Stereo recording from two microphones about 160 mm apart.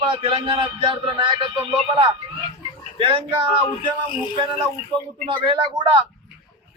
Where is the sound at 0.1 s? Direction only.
35° right (ahead or behind).